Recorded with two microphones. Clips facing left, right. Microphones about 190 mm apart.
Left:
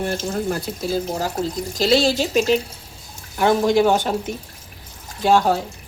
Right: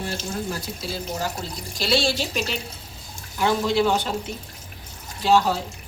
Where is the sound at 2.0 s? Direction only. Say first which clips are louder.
Left 8 dB; 45° left (ahead or behind).